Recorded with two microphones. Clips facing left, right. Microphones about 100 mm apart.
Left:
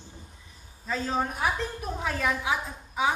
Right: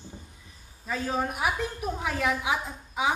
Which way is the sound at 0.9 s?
10° right (ahead or behind).